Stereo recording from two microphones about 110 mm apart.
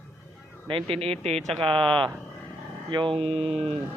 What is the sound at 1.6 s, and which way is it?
Speech, 50° right (ahead or behind).